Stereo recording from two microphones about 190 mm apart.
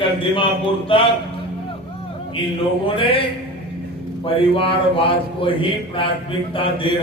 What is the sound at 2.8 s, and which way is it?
A man's voice, 30° left (ahead or behind).